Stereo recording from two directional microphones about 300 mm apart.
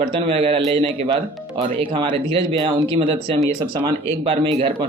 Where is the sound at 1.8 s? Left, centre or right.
Centre.